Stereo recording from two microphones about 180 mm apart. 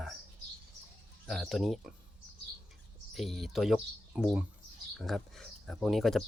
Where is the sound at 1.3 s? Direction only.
Centre (ahead or behind).